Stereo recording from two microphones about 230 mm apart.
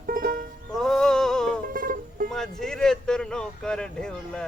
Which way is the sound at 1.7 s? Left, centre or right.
Right.